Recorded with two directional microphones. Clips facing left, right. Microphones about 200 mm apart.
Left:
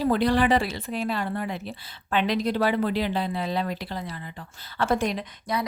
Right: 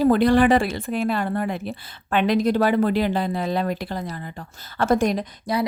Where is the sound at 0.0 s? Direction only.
50° right (ahead or behind).